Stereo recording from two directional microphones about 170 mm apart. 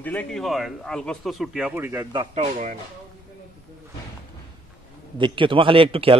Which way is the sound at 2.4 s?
50° right (ahead or behind).